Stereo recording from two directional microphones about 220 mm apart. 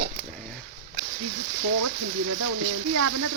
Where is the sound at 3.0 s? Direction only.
90° right.